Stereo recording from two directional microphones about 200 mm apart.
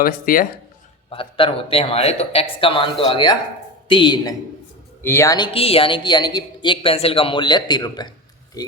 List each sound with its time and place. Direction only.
0.0 s speech: 45° left (ahead or behind)
1.1 s speech: 25° left (ahead or behind)